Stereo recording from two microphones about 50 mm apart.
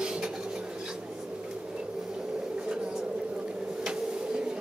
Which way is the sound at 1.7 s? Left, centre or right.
Centre.